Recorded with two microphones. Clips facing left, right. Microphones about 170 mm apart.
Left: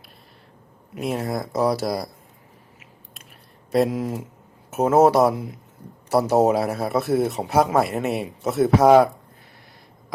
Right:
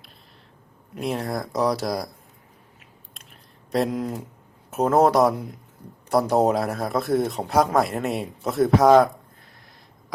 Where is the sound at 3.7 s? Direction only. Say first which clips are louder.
Left 3 dB; centre (ahead or behind).